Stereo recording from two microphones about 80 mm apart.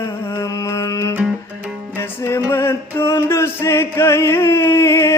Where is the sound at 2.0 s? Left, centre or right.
Left.